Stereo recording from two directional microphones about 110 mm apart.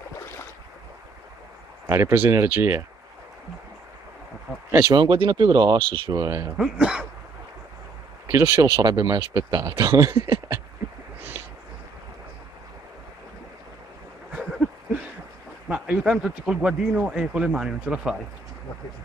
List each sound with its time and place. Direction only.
1.9 s speech: 25° right (ahead or behind)
4.9 s speech: 45° right (ahead or behind)
6.6 s speech: 5° right (ahead or behind)
8.3 s speech: 25° right (ahead or behind)
14.3 s a sound: centre (ahead or behind)
15.7 s speech: 5° right (ahead or behind)